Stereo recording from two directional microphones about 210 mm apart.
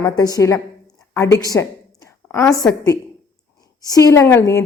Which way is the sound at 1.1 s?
15° left (ahead or behind).